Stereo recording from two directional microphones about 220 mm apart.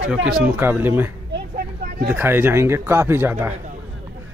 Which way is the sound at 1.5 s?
40° right (ahead or behind).